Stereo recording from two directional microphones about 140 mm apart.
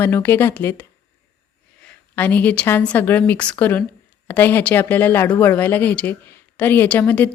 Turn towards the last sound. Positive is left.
turn(degrees=15)  # may be behind; listen again after turning